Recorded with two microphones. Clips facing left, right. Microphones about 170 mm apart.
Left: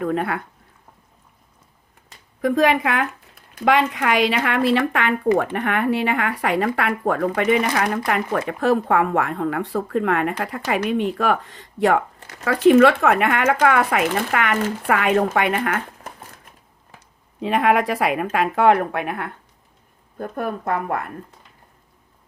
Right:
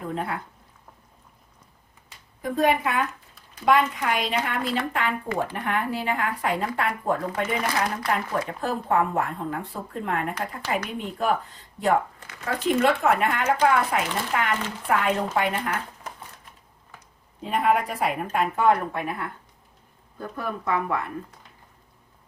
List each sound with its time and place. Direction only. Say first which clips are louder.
0.0 s speech: left 7 dB; 70° left (ahead or behind)
2.4 s a woman's voice: left 5 dB; 85° left
3.5 s speech: left 3 dB; 75° left (ahead or behind)
12.5 s speech: left 9 dB; 90° left
17.4 s speech: left 5 dB; 85° left
20.1 s speech: left 5 dB; 50° left (ahead or behind)